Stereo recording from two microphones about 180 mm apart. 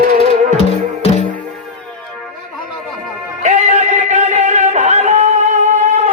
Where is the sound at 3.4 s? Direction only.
40° right (ahead or behind).